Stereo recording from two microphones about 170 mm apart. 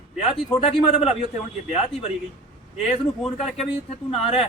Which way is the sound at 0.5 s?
35° left (ahead or behind).